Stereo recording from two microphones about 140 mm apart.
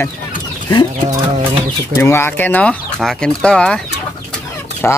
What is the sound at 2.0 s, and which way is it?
Speech, 20° left (ahead or behind).